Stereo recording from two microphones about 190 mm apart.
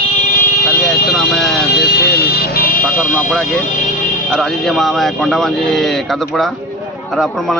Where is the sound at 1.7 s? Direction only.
60° left (ahead or behind).